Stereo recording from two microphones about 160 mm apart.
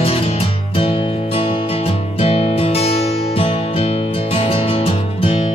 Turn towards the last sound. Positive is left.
turn(degrees=35)  # may be behind; listen again after turning